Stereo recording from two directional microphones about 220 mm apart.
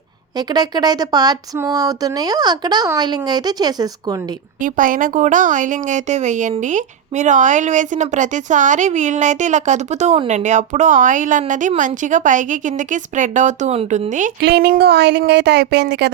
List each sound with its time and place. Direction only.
0.3 s speech: 20° right (ahead or behind)
4.6 s a woman's voice: 35° right (ahead or behind)
14.4 s a woman's voice: 45° right (ahead or behind)